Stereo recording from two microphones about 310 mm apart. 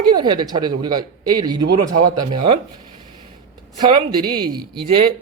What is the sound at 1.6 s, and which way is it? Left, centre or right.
Speech, right.